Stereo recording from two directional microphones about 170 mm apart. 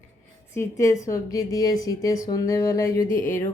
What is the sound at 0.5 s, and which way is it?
A woman's voice, 15° left (ahead or behind).